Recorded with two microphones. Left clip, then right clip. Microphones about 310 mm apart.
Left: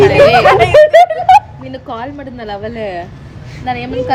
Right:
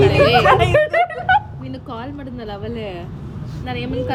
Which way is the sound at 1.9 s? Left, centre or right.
Centre.